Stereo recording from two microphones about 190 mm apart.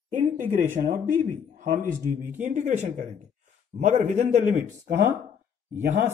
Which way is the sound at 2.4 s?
40° right (ahead or behind).